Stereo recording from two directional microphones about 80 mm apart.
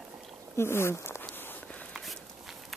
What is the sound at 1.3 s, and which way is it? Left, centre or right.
Walk, left.